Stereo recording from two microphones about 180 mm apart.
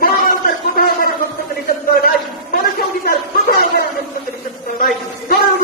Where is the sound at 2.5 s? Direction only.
55° left (ahead or behind).